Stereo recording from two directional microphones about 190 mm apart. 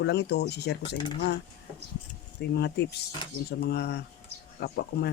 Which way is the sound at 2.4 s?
60° left (ahead or behind).